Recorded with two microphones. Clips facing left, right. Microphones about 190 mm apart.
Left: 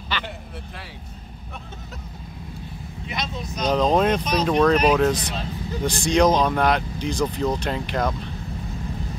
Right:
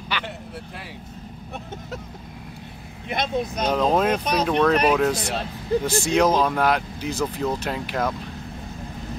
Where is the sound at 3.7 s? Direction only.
5° right (ahead or behind).